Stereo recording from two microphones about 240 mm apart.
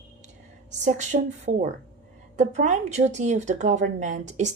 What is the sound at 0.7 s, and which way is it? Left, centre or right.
A woman's voice, right.